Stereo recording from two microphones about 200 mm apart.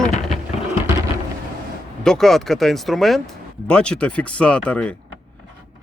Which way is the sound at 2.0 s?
Centre (ahead or behind).